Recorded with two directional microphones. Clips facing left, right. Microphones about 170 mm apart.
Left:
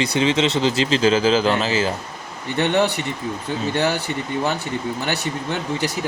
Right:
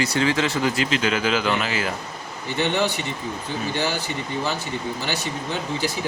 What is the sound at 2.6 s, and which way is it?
Speech, 60° left (ahead or behind).